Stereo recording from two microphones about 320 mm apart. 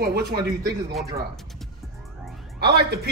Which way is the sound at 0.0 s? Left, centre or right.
Right.